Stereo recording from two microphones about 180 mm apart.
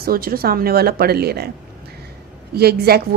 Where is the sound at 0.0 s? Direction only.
55° right (ahead or behind).